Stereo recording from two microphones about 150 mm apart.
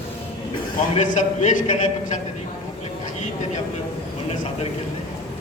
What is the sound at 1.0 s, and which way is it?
A man's voice, 50° left (ahead or behind).